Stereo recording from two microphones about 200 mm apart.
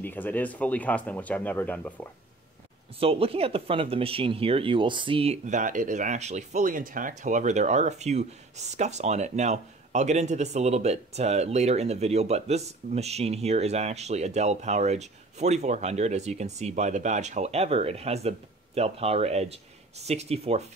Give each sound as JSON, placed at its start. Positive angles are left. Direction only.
{"t": 0.0, "sound": "speech", "side_deg": 10}
{"t": 3.0, "sound": "speech", "side_deg": -30}